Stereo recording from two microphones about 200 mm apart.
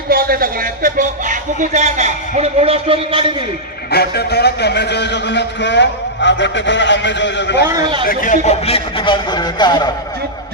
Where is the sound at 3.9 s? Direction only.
55° left (ahead or behind).